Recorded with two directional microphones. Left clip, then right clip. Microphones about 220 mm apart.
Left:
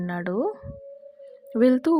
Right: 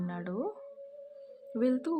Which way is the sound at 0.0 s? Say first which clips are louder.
Left 10 dB; 30° left (ahead or behind).